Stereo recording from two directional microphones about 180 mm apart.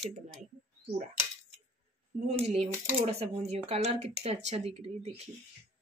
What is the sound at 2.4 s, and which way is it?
Speech, 35° right (ahead or behind).